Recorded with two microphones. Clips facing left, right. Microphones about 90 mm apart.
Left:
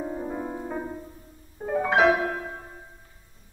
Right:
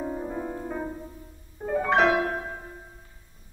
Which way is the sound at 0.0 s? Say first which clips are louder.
Even; 5° left (ahead or behind).